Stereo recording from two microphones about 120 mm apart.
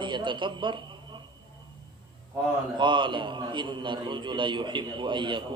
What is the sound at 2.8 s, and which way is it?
A man's voice, 40° right (ahead or behind).